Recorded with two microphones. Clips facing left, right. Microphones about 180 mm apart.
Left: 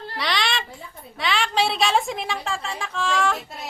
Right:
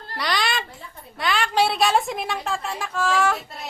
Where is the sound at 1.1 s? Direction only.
Centre (ahead or behind).